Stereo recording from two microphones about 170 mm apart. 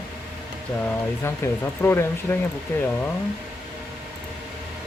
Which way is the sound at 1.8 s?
15° left (ahead or behind).